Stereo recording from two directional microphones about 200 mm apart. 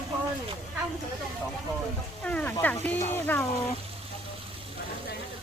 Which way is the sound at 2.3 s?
5° left (ahead or behind).